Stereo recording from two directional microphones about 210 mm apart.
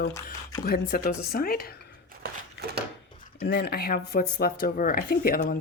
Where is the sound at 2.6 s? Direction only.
50° right (ahead or behind).